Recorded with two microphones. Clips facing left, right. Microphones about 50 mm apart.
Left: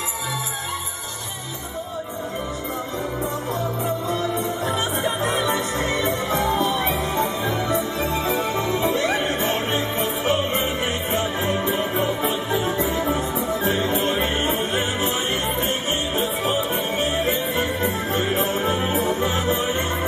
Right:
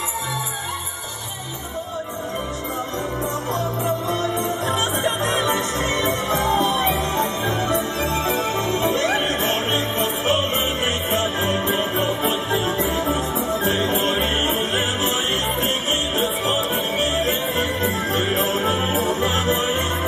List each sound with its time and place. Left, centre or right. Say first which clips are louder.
4.1 s music: right 1 dB; right